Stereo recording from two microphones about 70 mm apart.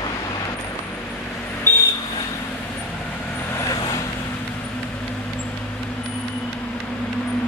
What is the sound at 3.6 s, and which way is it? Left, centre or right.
Vehicle, left.